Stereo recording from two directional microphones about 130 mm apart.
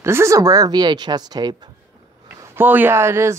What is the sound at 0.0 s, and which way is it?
Speech, 20° right (ahead or behind).